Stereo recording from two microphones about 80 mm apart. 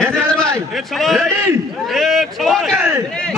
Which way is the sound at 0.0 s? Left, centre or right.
Centre.